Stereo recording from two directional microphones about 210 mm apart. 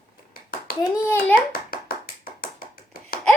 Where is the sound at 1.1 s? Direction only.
10° left (ahead or behind).